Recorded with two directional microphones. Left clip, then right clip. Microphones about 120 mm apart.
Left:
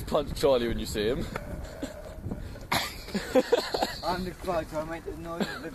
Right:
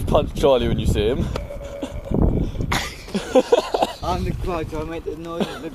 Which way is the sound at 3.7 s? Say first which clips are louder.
Right 8 dB; 20° left (ahead or behind).